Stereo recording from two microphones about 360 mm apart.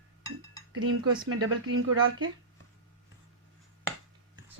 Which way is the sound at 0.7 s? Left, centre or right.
Right.